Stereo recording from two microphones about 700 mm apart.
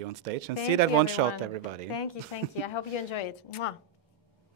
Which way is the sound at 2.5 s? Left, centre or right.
Left.